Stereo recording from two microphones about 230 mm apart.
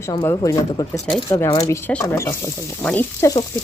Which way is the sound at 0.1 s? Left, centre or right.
Centre.